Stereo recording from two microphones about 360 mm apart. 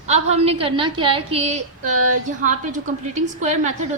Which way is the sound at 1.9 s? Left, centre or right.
Right.